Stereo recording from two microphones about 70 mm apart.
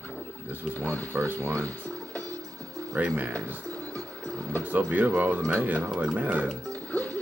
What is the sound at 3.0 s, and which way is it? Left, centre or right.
Speech, right.